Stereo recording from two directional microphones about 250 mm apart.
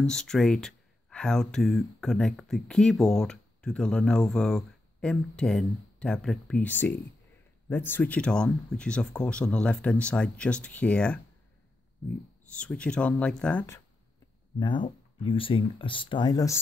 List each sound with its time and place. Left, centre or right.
0.0 s speech: centre
12.5 s speech: centre
14.6 s speech: centre